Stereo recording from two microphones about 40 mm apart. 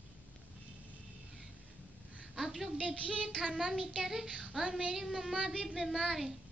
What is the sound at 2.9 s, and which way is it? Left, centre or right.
Child singing, right.